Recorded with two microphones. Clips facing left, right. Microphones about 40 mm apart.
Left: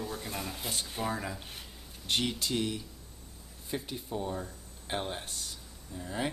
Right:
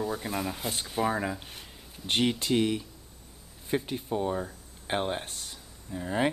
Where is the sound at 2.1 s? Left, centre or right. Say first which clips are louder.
Right 5 dB; right.